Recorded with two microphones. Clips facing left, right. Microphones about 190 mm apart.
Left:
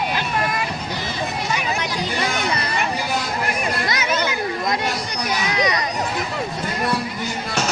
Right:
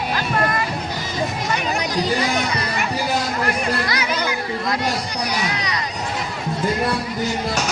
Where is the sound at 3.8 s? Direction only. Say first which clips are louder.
Left 1 dB; 20° left (ahead or behind).